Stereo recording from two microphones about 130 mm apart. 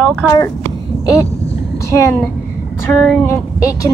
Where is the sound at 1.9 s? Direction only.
20° left (ahead or behind).